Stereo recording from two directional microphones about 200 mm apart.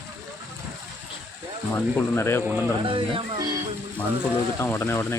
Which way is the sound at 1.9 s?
10° left (ahead or behind).